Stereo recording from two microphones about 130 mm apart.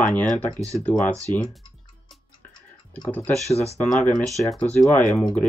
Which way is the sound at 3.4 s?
55° left (ahead or behind).